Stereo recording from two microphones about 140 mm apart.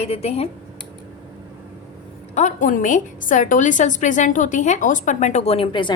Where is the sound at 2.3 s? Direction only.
65° left (ahead or behind).